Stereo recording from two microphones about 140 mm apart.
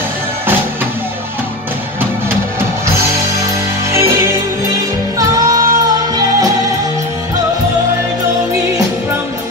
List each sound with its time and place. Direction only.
3.9 s music: 20° right (ahead or behind)
5.5 s music: 25° right (ahead or behind)